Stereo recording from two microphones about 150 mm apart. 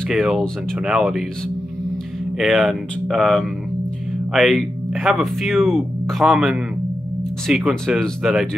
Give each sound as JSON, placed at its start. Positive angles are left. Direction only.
{"t": 0.1, "sound": "speech", "side_deg": 0}
{"t": 2.3, "sound": "speech", "side_deg": 0}